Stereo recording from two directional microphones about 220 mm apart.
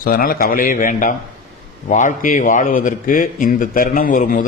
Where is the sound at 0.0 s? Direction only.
40° left (ahead or behind).